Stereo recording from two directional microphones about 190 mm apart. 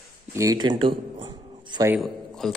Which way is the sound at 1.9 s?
Centre (ahead or behind).